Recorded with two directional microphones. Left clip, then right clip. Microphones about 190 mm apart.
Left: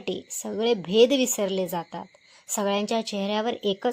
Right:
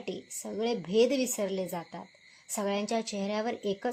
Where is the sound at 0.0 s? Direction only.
30° left (ahead or behind).